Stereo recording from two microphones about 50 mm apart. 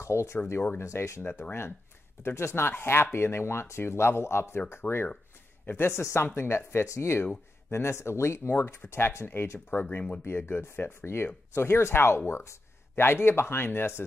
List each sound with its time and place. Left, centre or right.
0.0 s speech: left
1.4 s speech: left
5.9 s speech: left
8.5 s speech: left
11.5 s speech: left